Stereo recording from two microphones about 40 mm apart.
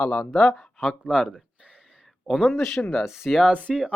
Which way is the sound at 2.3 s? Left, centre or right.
Centre.